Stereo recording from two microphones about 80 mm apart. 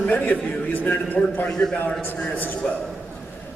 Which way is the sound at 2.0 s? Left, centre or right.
Left.